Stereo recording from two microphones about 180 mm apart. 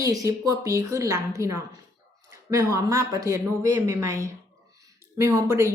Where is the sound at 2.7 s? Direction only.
15° right (ahead or behind).